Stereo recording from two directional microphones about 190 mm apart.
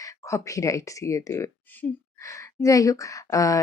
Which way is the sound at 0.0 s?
15° left (ahead or behind).